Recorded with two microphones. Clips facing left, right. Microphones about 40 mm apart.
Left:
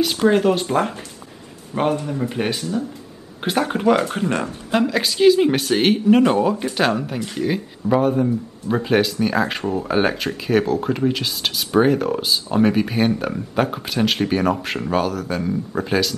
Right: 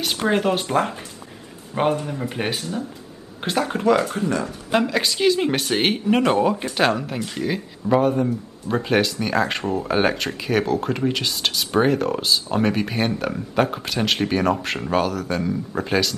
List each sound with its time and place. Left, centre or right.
0.2 s speech: centre
3.7 s speech: left
4.1 s speech: left
4.7 s speech: centre